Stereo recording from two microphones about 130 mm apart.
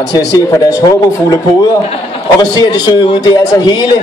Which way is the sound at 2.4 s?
30° left (ahead or behind).